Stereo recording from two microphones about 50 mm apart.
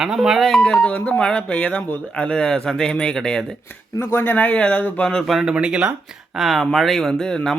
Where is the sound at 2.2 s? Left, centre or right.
Centre.